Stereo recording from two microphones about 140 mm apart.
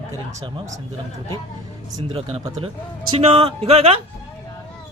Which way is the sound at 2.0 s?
40° right (ahead or behind).